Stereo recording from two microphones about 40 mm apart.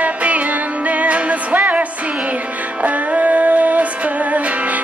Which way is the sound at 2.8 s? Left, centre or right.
Right.